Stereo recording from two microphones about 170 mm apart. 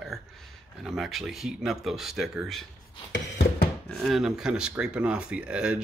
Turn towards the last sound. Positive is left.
turn(degrees=-5)  # may be behind; listen again after turning